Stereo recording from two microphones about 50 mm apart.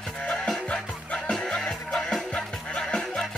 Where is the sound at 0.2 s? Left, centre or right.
Left.